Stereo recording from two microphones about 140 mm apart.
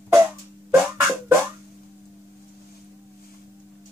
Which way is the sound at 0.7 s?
15° right (ahead or behind).